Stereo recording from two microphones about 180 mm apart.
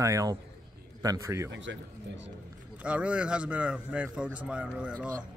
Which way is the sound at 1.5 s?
85° right.